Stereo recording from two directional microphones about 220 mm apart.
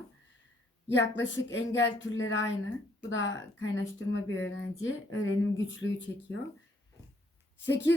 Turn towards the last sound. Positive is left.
turn(degrees=55)  # may be behind; listen again after turning